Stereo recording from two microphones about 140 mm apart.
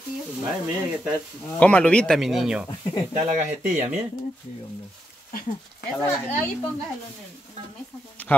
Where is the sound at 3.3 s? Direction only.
60° right (ahead or behind).